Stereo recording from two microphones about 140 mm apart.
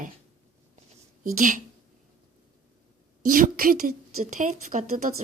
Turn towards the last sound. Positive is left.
turn(degrees=-70)  # may be behind; listen again after turning